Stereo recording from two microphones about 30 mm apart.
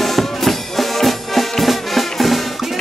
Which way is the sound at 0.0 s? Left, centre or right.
Centre.